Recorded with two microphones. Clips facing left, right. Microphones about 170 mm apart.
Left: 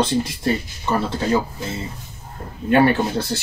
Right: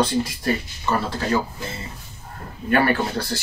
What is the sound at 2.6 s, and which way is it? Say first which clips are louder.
Speech: left 4 dB; 25° left (ahead or behind).